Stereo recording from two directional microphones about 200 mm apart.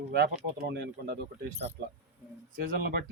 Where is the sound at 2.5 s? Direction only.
45° right (ahead or behind).